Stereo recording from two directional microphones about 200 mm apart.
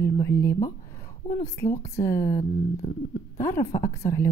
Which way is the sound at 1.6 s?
15° left (ahead or behind).